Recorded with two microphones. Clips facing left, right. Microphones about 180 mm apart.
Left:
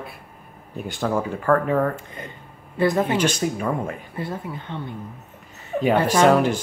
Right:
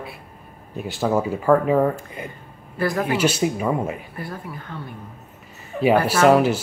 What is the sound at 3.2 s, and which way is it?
Speech, 5° right (ahead or behind).